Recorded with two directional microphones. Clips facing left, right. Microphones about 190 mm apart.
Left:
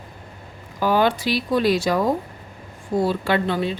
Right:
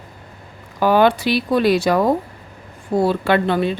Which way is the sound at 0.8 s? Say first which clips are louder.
Right 4 dB; 65° right (ahead or behind).